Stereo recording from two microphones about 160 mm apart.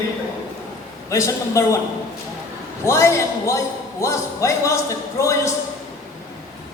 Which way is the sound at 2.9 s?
15° left (ahead or behind).